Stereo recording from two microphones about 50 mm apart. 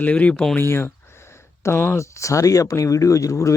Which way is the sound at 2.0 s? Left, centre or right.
Left.